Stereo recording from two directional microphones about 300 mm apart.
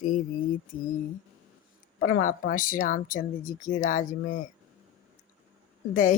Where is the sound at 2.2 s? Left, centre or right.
Left.